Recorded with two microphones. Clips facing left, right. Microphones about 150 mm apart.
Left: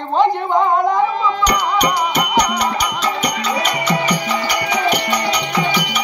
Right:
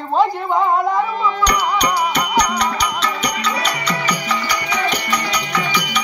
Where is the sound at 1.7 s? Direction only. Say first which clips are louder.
Left 1 dB; 5° left (ahead or behind).